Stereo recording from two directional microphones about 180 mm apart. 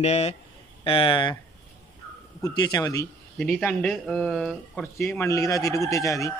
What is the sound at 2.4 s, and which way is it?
Speech, 20° left (ahead or behind).